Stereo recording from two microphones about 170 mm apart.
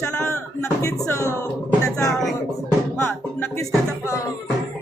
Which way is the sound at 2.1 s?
Centre (ahead or behind).